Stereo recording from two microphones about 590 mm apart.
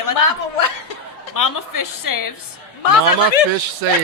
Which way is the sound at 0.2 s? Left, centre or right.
Left.